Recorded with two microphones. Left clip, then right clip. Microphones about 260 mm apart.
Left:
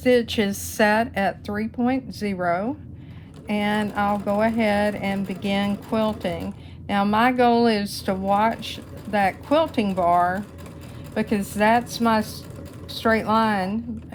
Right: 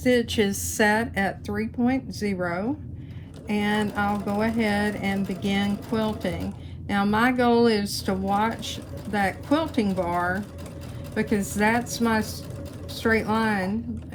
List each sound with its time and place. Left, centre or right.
0.0 s speech: left